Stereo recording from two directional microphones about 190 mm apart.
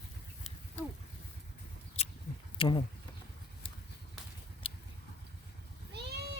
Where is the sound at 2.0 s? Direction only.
35° left (ahead or behind).